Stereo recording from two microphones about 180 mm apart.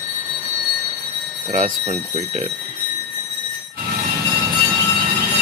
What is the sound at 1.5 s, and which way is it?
Speech, 40° right (ahead or behind).